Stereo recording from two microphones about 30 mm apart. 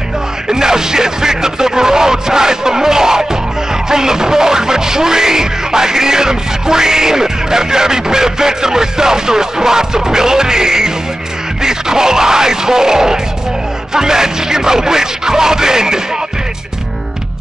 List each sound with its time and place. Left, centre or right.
0.5 s music: right